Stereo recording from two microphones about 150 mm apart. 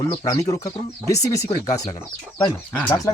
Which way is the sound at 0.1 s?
25° left (ahead or behind).